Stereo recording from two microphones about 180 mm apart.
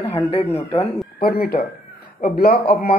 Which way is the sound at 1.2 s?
55° left (ahead or behind).